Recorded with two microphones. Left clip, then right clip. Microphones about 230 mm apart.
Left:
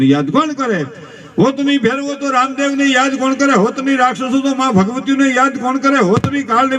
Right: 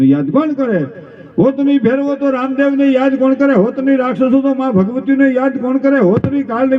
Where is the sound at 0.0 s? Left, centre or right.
Left.